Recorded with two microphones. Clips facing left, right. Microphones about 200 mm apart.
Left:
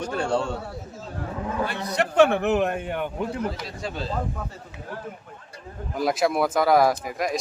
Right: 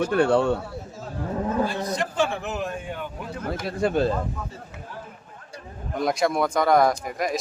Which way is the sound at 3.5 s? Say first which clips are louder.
Right 9 dB; 55° right (ahead or behind).